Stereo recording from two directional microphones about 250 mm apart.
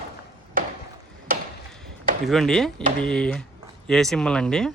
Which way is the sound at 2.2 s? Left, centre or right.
Centre.